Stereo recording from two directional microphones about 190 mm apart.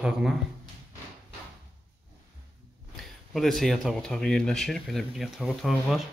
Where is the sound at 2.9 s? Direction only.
Centre (ahead or behind).